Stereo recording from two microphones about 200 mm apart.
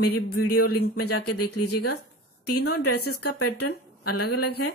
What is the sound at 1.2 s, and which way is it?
Speech, 90° left.